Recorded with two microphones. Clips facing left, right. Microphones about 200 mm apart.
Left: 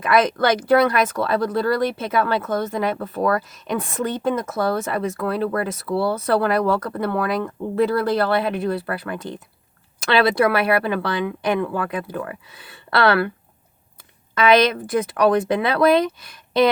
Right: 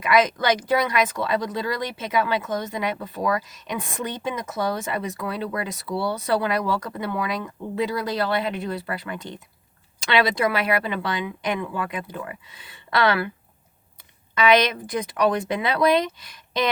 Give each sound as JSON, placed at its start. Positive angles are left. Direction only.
{"t": 0.1, "sound": "speech", "side_deg": 55}
{"t": 10.3, "sound": "speech", "side_deg": 60}
{"t": 14.6, "sound": "speech", "side_deg": 55}
{"t": 16.3, "sound": "a sound", "side_deg": 55}